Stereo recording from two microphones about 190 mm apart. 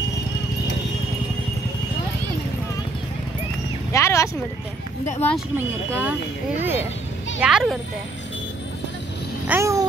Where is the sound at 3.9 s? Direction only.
15° left (ahead or behind).